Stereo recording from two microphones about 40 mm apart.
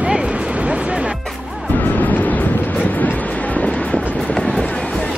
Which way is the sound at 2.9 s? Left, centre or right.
Left.